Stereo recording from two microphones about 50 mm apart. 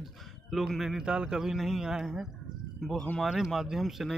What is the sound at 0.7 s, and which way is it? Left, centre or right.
Speech, centre.